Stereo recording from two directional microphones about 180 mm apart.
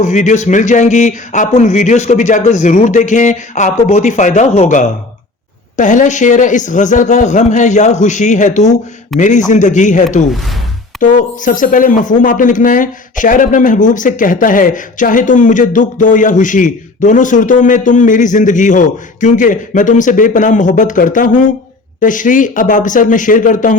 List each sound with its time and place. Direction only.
0.0 s speech: 45° left (ahead or behind)